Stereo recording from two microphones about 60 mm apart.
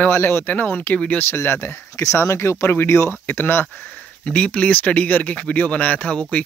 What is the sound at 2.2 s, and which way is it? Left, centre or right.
Speech, left.